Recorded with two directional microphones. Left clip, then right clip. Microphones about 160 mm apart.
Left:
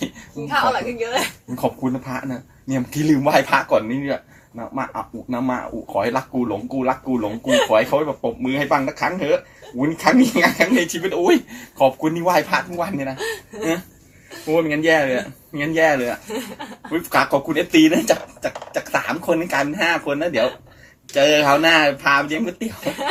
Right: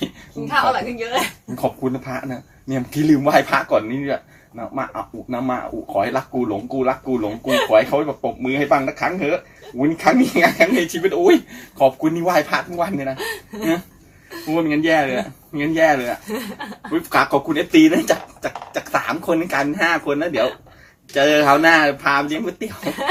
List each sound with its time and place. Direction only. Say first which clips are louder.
0.4 s speech: right 1 dB; 40° right (ahead or behind)
1.8 s speech: right 1 dB; 15° left (ahead or behind)
7.4 s speech: left 2 dB; 45° right (ahead or behind)
7.7 s speech: right 2 dB; 20° left (ahead or behind)
13.1 s speech: left 1 dB; 45° right (ahead or behind)
14.5 s speech: left 1 dB; 20° left (ahead or behind)
22.8 s speech: even; 35° right (ahead or behind)